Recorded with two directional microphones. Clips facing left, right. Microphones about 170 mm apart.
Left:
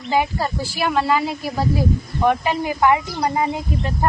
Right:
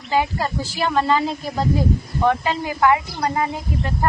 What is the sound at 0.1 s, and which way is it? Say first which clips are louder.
Speech: left 1 dB; 15° left (ahead or behind).